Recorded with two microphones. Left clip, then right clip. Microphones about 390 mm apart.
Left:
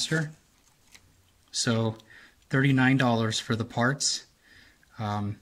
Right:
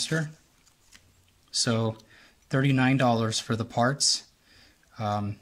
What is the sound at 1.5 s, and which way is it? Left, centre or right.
Speech, centre.